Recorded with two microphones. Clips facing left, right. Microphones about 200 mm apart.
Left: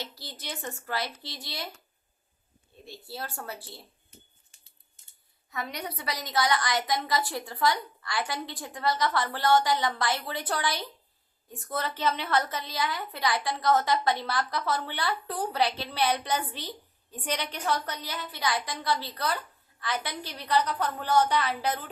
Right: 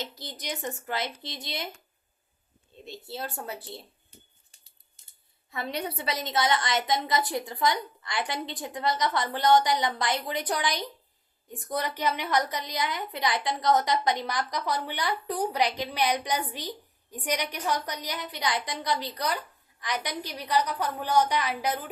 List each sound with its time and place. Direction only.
0.0 s a woman's voice: 20° right (ahead or behind)
2.8 s a woman's voice: 20° right (ahead or behind)
5.5 s a woman's voice: 30° right (ahead or behind); by 21.8 s 10° right (ahead or behind)